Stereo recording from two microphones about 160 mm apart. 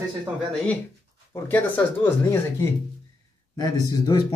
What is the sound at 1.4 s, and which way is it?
Speech, 10° left (ahead or behind).